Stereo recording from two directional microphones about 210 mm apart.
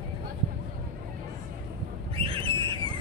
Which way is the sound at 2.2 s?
25° right (ahead or behind).